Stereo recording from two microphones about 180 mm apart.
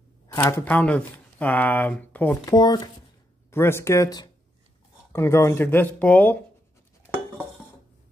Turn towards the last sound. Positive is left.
turn(degrees=15)  # may be behind; listen again after turning